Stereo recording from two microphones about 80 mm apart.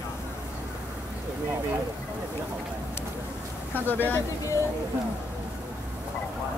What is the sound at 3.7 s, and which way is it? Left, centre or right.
Speech, left.